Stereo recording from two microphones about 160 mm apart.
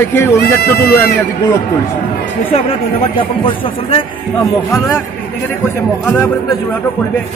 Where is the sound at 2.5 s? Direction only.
35° left (ahead or behind).